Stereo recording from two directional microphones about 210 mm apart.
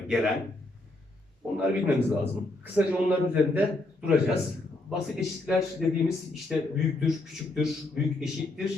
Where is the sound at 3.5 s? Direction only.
5° right (ahead or behind).